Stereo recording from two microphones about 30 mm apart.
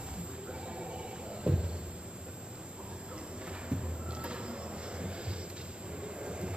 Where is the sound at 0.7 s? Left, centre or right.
Right.